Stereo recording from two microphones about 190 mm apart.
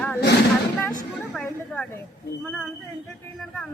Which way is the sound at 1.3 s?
Centre (ahead or behind).